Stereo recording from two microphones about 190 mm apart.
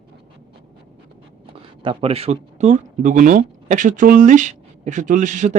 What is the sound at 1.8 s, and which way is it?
Speech, 25° right (ahead or behind).